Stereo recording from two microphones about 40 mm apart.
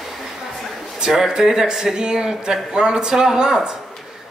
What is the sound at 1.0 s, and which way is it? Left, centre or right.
Speech, centre.